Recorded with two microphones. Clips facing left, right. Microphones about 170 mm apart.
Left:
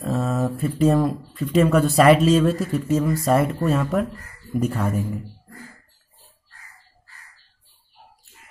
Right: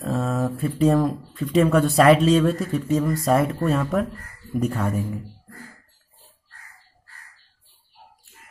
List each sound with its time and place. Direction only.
0.0 s speech: centre (ahead or behind)